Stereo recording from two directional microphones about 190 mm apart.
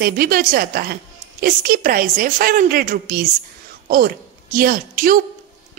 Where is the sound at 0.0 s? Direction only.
50° right (ahead or behind).